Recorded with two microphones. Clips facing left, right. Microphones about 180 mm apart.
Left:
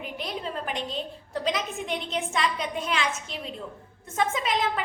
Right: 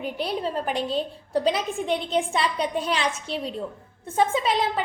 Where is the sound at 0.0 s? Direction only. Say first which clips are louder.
Right 6 dB; 35° right (ahead or behind).